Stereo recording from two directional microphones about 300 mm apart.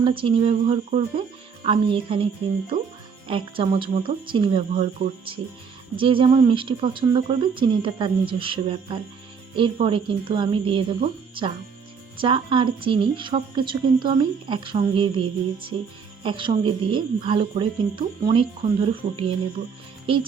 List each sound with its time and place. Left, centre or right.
0.0 s speech: centre
3.2 s speech: centre